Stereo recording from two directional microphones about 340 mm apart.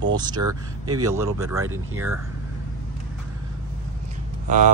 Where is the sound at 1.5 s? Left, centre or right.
Right.